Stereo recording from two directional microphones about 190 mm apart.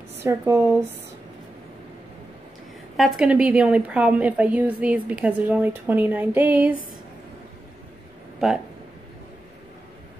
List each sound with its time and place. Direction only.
0.2 s a woman's voice: 15° right (ahead or behind)
3.0 s a woman's voice: centre (ahead or behind)